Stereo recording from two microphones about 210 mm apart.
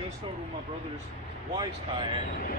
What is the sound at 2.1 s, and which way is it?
Speech, 40° left (ahead or behind).